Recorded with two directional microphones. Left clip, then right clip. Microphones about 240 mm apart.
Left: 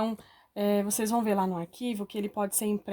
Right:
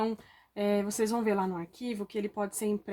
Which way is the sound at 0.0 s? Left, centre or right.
Left.